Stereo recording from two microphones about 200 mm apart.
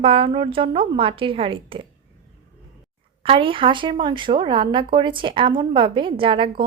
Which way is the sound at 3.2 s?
25° right (ahead or behind).